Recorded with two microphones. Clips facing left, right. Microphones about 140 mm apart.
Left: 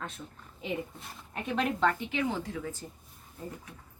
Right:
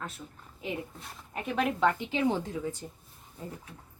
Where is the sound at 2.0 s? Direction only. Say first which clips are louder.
Right 3 dB; 25° right (ahead or behind).